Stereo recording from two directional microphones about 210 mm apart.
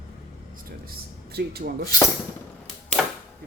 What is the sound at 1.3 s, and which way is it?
Speech, 50° right (ahead or behind).